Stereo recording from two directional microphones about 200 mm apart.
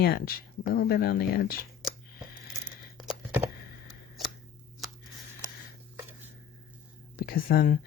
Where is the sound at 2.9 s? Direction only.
Centre (ahead or behind).